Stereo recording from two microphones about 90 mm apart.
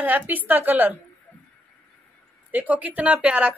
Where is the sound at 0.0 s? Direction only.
20° right (ahead or behind).